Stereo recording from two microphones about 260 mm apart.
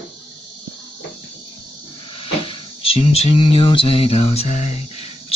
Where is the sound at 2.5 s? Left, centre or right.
Left.